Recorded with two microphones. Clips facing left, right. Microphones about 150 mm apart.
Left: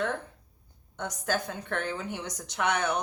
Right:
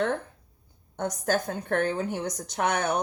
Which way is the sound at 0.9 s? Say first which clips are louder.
Right 4 dB; 45° right (ahead or behind).